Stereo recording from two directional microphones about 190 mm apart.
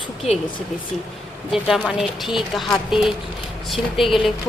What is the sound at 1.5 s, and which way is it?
Speech, centre (ahead or behind).